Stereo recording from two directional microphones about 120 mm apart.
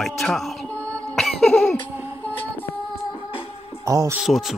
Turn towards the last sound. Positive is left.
turn(degrees=0)  # may be behind; listen again after turning